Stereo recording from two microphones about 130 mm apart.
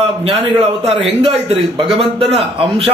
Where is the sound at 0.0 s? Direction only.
50° right (ahead or behind).